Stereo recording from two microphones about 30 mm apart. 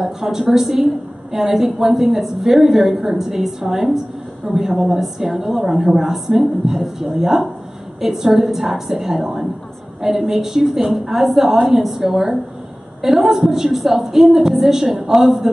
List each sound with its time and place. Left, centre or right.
0.0 s a woman's voice: centre